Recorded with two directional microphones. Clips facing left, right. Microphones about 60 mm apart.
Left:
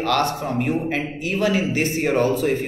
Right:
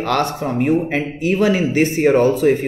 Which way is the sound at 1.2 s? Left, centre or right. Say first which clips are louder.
Right 6 dB; right.